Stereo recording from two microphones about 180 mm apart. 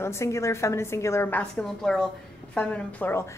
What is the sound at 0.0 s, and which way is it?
A woman's voice, 15° left (ahead or behind).